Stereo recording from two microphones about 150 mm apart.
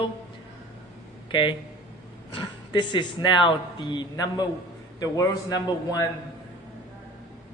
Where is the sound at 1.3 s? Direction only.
35° left (ahead or behind).